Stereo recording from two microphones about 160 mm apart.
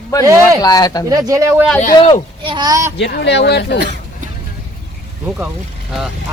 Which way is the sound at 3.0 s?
90° left.